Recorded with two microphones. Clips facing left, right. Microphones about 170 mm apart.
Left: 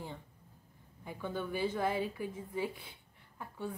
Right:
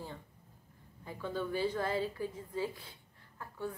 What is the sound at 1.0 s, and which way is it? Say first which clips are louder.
A woman's voice: right 1 dB; 15° left (ahead or behind).